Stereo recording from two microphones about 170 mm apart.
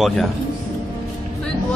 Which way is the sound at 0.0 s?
Centre (ahead or behind).